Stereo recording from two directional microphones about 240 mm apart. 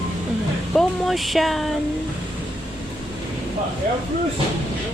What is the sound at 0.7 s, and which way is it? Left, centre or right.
Speech, centre.